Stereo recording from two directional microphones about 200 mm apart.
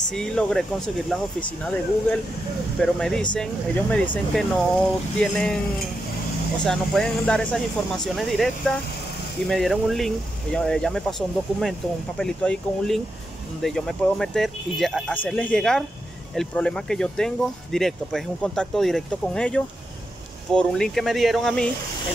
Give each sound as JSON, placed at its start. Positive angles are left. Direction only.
{"t": 0.1, "sound": "speech", "side_deg": 5}
{"t": 6.6, "sound": "speech", "side_deg": 0}